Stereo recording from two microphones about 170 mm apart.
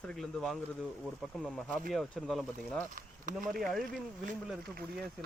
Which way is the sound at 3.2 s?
50° right (ahead or behind).